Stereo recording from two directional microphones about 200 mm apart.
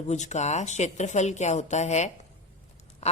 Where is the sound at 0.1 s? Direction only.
35° left (ahead or behind).